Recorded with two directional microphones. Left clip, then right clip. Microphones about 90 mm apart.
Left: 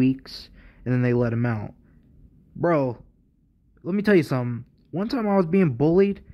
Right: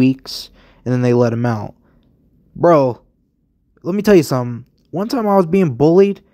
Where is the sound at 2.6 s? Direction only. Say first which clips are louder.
Right 11 dB; 40° right (ahead or behind).